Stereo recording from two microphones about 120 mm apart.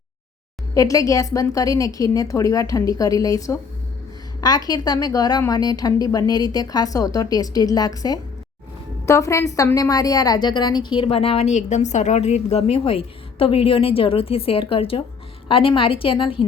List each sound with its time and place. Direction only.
0.7 s a woman's voice: 30° left (ahead or behind); by 16.5 s 45° left (ahead or behind)